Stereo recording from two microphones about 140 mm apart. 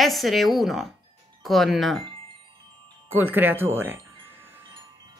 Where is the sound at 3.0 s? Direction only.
15° right (ahead or behind).